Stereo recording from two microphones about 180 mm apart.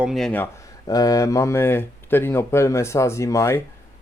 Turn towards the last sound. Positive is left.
turn(degrees=15)  # may be behind; listen again after turning